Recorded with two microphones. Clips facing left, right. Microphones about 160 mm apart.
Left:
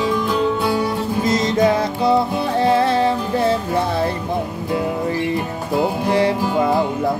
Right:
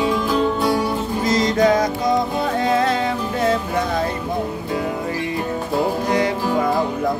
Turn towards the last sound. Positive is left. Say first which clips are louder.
# left 2 dB
turn(degrees=30)  # may be behind; listen again after turning